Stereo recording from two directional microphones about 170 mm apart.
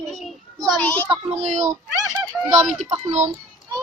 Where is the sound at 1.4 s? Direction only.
40° right (ahead or behind).